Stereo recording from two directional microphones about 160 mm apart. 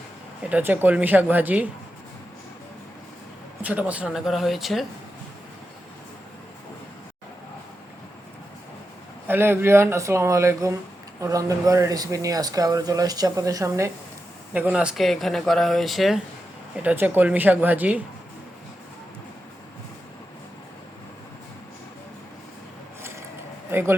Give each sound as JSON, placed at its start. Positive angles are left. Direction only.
{"t": 0.5, "sound": "speech", "side_deg": -10}
{"t": 3.6, "sound": "speech", "side_deg": -10}
{"t": 9.2, "sound": "speech", "side_deg": -15}
{"t": 14.5, "sound": "speech", "side_deg": -10}
{"t": 16.8, "sound": "speech", "side_deg": -15}
{"t": 23.7, "sound": "a sound", "side_deg": -15}